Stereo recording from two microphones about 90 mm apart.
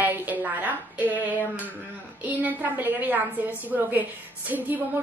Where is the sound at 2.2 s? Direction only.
20° right (ahead or behind).